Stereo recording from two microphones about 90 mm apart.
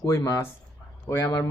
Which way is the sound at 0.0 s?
35° left (ahead or behind).